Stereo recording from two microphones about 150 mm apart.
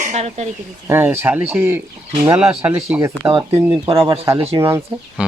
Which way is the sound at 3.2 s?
40° right (ahead or behind).